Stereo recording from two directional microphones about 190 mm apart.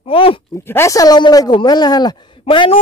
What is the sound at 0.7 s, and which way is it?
Speech, 15° left (ahead or behind).